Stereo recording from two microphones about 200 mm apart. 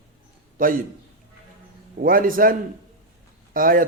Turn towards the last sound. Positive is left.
turn(degrees=-45)  # may be behind; listen again after turning